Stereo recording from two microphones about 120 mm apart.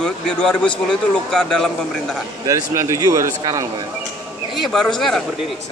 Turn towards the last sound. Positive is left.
turn(degrees=5)  # may be behind; listen again after turning